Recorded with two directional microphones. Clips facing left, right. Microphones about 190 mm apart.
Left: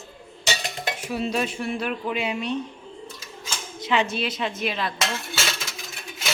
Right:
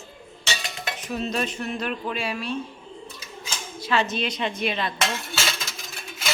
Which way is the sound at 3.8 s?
15° left (ahead or behind).